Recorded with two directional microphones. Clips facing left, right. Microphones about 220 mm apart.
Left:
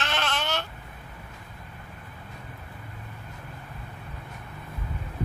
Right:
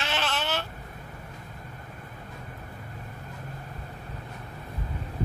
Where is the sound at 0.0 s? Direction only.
5° right (ahead or behind).